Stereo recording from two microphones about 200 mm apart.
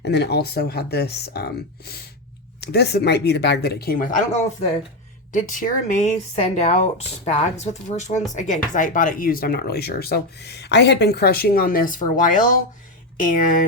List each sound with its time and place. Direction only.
0.0 s a woman's voice: 55° left (ahead or behind)